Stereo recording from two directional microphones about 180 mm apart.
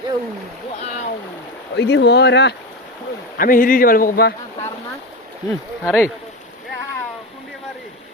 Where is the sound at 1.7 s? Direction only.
75° left (ahead or behind).